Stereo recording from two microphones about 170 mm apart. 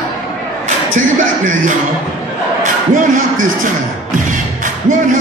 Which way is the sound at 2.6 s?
50° right (ahead or behind).